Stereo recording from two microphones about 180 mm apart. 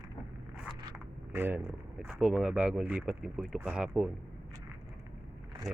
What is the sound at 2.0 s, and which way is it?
Speech, 5° right (ahead or behind).